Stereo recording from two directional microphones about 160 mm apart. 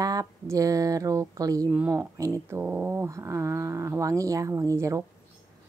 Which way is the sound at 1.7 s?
10° right (ahead or behind).